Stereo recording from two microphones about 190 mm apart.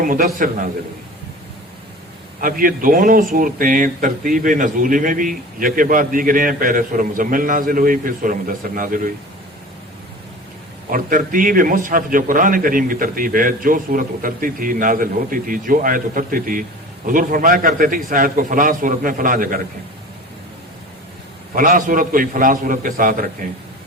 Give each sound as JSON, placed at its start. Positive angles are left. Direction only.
{"t": 0.0, "sound": "speech", "side_deg": -50}
{"t": 2.4, "sound": "speech", "side_deg": -45}
{"t": 10.9, "sound": "speech", "side_deg": -45}
{"t": 21.5, "sound": "speech", "side_deg": -45}